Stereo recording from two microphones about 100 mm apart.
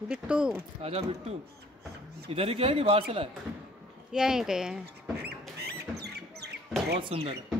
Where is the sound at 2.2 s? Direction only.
80° right.